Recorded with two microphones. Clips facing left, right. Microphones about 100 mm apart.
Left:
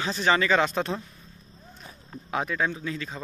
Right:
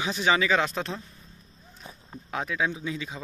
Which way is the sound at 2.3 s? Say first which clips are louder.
Left 1 dB; centre (ahead or behind).